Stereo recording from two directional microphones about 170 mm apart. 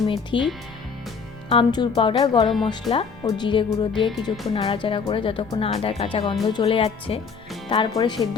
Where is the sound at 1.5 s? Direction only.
30° left (ahead or behind).